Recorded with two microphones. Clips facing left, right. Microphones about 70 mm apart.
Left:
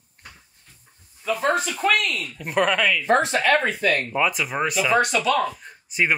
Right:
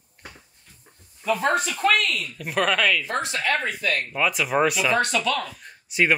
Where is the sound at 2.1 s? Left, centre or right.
Centre.